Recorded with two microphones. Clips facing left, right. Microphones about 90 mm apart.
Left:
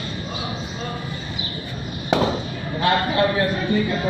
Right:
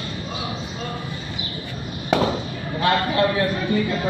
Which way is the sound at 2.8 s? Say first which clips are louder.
Even; 25° left (ahead or behind).